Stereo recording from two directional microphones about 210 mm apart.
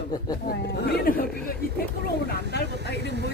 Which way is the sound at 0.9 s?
45° left (ahead or behind).